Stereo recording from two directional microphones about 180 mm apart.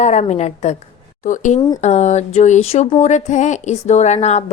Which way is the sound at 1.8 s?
40° left (ahead or behind).